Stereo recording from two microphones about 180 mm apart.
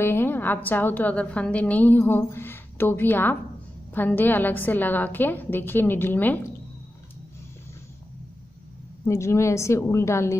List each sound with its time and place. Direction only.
0.0 s a woman's voice: 10° left (ahead or behind)
9.0 s a woman's voice: 15° left (ahead or behind)